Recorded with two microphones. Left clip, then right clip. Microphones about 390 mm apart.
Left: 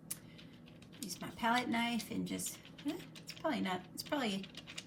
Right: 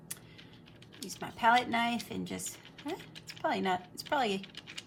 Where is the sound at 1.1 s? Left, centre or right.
Centre.